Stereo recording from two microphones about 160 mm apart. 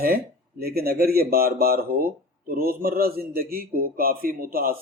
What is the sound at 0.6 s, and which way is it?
Speech, 75° right (ahead or behind).